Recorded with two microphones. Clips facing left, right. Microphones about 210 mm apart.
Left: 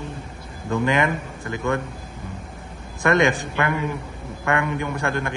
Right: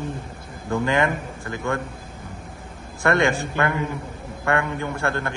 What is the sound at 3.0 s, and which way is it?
A man's voice, 20° left (ahead or behind).